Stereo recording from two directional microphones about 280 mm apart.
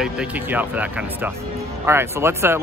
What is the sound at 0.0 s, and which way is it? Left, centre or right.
Speech, centre.